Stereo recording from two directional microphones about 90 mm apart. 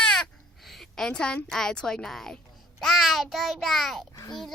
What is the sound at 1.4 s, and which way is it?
A child's voice, 5° left (ahead or behind).